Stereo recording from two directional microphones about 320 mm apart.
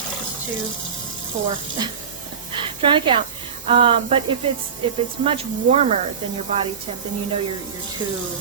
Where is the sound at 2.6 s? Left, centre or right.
Centre.